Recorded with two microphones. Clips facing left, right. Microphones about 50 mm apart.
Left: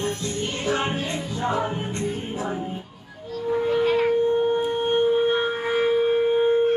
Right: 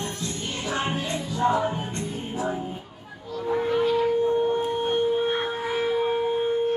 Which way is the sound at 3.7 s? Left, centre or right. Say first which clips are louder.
Left 2 dB; left.